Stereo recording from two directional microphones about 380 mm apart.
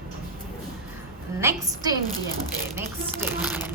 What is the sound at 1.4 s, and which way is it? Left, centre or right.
Speech, centre.